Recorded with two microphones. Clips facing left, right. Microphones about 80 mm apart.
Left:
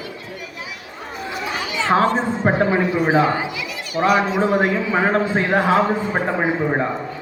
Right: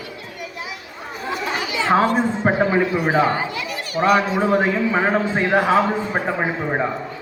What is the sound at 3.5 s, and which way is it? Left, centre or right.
Children playing, right.